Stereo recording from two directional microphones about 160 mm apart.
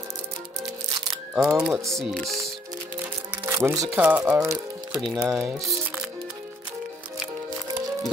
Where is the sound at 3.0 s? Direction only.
15° right (ahead or behind).